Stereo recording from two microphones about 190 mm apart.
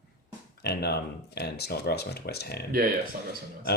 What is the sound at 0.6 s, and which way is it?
Speech, 60° left (ahead or behind).